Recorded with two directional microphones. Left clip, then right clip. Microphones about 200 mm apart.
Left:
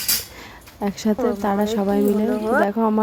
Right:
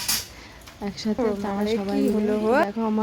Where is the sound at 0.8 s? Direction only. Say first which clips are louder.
Left 4 dB; 25° left (ahead or behind).